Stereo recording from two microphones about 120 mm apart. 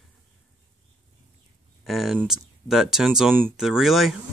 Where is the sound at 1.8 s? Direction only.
Centre (ahead or behind).